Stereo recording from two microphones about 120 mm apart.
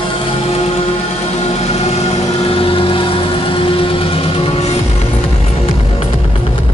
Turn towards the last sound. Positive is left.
turn(degrees=55)  # may be behind; listen again after turning